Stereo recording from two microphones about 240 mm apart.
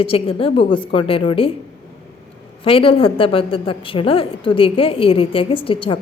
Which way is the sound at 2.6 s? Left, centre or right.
Left.